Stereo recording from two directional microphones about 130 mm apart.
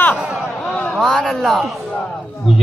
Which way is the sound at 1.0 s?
Centre (ahead or behind).